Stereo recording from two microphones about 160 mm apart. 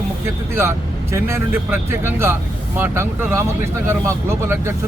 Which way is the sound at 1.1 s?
15° right (ahead or behind).